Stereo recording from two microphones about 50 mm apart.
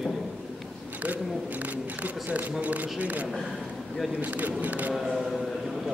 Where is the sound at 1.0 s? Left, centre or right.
Right.